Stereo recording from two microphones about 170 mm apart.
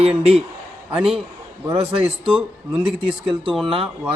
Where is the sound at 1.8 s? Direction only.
35° right (ahead or behind).